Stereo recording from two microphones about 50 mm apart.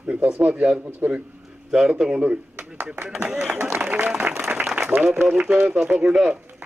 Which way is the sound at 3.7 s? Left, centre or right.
Right.